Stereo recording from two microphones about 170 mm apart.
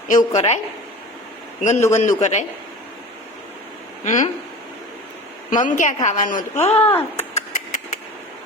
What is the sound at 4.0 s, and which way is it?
Speech, 50° left (ahead or behind).